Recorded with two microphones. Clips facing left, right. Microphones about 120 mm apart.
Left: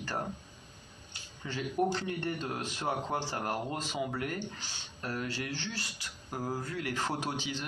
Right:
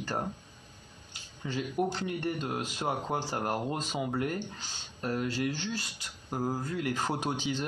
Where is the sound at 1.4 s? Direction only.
15° right (ahead or behind).